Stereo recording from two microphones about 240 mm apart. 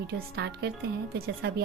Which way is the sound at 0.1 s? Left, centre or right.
Right.